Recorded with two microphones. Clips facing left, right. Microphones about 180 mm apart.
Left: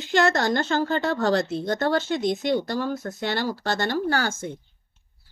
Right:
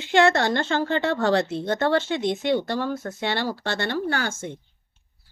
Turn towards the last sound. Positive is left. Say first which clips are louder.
# left 2 dB
turn(degrees=35)  # may be behind; listen again after turning